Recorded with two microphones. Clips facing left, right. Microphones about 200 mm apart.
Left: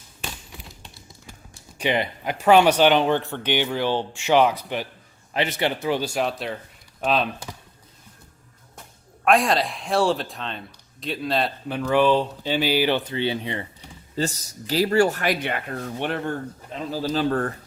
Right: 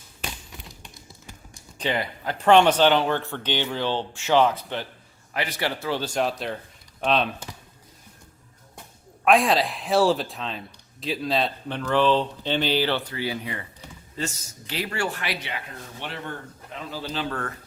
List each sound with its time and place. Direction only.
1.8 s speech: 15° left (ahead or behind)
5.3 s speech: 25° left (ahead or behind)
6.2 s a man's voice: centre (ahead or behind)
9.2 s a man's voice: centre (ahead or behind); by 16.3 s 55° left (ahead or behind)
16.7 s speech: 40° left (ahead or behind)